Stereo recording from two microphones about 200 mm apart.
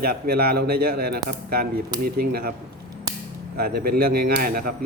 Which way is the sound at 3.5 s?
50° right (ahead or behind).